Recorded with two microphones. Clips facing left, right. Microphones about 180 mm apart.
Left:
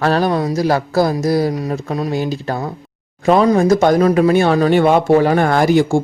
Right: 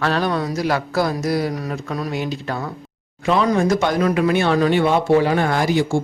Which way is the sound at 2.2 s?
35° left (ahead or behind).